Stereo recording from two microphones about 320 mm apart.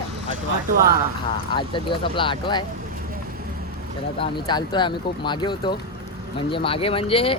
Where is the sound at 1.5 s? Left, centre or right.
Centre.